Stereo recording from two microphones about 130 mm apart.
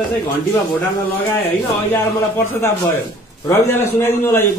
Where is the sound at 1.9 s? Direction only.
15° left (ahead or behind).